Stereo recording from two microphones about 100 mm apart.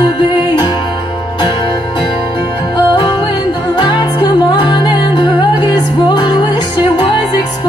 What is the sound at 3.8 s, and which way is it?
Music, 45° left (ahead or behind).